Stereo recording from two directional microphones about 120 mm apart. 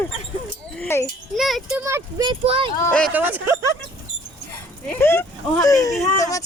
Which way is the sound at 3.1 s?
15° right (ahead or behind).